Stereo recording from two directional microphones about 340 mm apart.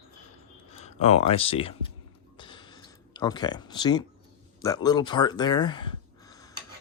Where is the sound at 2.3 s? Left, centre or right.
Centre.